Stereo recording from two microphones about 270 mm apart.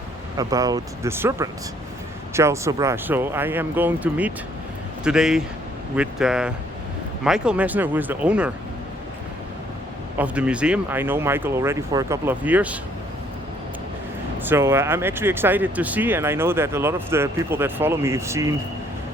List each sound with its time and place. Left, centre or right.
0.3 s speech: centre
10.2 s speech: centre
14.4 s speech: centre